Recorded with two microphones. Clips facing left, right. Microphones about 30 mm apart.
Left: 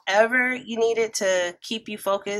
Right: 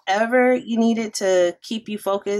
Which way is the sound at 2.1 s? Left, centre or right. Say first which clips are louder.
Right 1 dB; centre.